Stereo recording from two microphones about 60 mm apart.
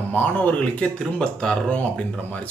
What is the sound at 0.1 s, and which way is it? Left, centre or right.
Speech, left.